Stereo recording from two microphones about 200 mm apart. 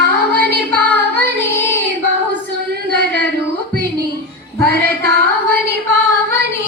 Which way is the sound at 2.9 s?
55° right (ahead or behind).